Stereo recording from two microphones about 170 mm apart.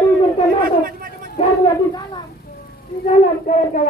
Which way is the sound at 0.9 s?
60° right (ahead or behind).